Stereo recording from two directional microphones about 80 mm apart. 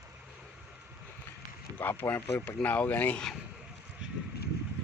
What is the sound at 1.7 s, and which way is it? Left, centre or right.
Speech, left.